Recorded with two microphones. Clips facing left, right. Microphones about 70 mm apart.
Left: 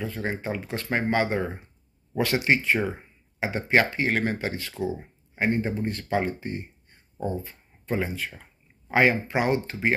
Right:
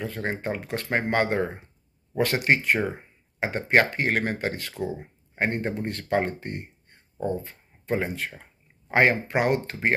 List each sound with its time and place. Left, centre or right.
0.0 s speech: right